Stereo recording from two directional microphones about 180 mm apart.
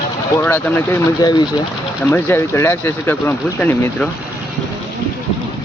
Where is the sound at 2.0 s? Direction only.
15° left (ahead or behind).